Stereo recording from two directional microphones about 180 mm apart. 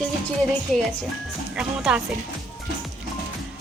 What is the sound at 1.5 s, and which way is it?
Speech, 5° right (ahead or behind).